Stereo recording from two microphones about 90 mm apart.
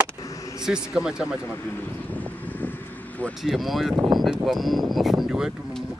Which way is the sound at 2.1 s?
20° left (ahead or behind).